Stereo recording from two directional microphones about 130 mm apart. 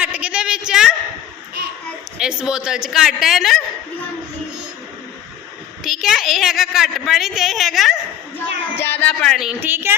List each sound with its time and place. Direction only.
0.0 s a sound: 10° right (ahead or behind)
2.1 s a woman's voice: 5° right (ahead or behind)
5.8 s a woman's voice: centre (ahead or behind)
8.8 s speech: 15° left (ahead or behind)
9.4 s a woman's voice: 10° right (ahead or behind)